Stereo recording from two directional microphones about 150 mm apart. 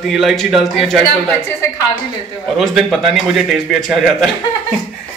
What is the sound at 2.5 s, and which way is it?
A man's voice, centre (ahead or behind).